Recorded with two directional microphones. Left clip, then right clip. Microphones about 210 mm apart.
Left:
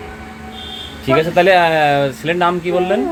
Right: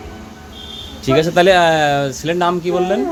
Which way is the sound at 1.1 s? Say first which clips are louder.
Even; 20° right (ahead or behind).